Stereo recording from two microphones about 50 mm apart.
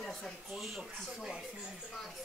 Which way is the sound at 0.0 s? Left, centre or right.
Centre.